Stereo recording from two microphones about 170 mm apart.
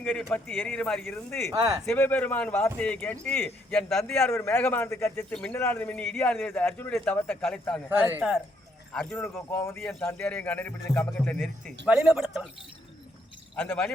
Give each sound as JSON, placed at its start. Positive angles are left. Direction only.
{"t": 0.0, "sound": "speech", "side_deg": 5}
{"t": 1.5, "sound": "speech", "side_deg": -20}
{"t": 1.9, "sound": "speech", "side_deg": 10}
{"t": 7.9, "sound": "speech", "side_deg": -10}
{"t": 8.9, "sound": "speech", "side_deg": 10}
{"t": 11.9, "sound": "speech", "side_deg": -5}
{"t": 13.6, "sound": "speech", "side_deg": 5}